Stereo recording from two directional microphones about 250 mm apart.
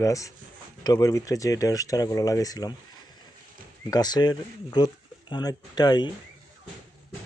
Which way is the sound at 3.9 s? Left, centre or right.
Centre.